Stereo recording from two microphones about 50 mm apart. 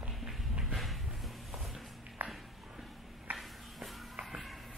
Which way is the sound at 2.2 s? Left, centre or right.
Right.